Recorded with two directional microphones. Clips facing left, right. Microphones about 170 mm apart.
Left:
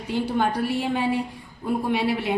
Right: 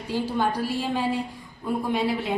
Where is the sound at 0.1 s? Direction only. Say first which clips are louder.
Left 2 dB; 65° left (ahead or behind).